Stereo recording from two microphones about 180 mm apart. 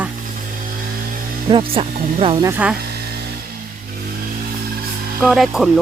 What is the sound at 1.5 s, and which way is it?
Speech, 30° right (ahead or behind).